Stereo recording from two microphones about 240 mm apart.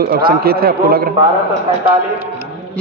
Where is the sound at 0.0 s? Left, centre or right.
Right.